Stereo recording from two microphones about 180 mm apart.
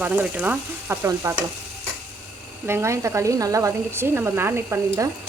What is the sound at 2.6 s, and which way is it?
Stir, 15° right (ahead or behind).